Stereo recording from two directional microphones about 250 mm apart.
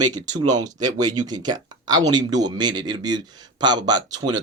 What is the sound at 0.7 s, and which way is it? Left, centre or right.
Speech, centre.